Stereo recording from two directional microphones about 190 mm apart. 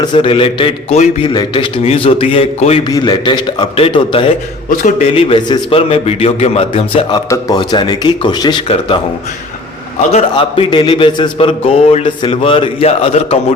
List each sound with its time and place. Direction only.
0.0 s a man's voice: 25° left (ahead or behind)
10.1 s a man's voice: 30° left (ahead or behind)